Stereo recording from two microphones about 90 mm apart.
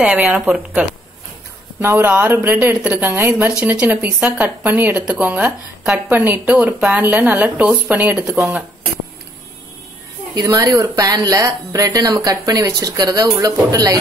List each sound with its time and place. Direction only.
0.0 s a woman's voice: 15° right (ahead or behind)
1.8 s a woman's voice: 25° right (ahead or behind)
10.3 s speech: 40° right (ahead or behind)